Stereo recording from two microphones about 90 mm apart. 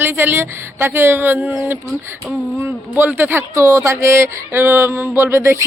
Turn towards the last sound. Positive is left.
turn(degrees=-30)  # may be behind; listen again after turning